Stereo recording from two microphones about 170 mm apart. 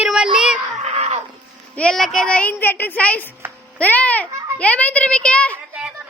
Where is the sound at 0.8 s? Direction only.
40° right (ahead or behind).